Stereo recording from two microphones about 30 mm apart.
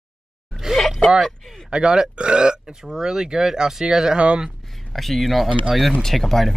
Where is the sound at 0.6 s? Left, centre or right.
Centre.